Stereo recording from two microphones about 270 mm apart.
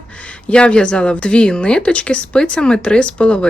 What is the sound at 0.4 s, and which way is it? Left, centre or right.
A woman's voice, centre.